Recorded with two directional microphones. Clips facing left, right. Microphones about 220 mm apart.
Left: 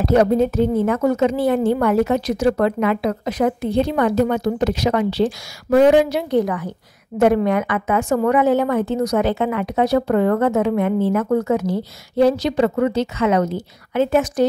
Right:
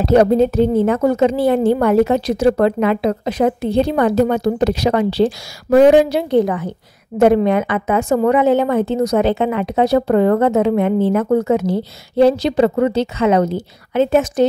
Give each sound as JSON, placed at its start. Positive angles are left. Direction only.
{"t": 0.0, "sound": "a woman's voice", "side_deg": -30}